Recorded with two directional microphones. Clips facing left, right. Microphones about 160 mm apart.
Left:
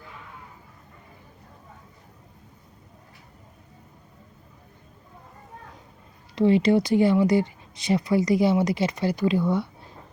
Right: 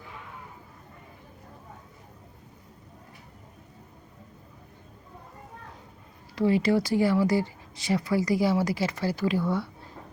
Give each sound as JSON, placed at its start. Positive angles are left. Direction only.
{"t": 6.3, "sound": "speech", "side_deg": 20}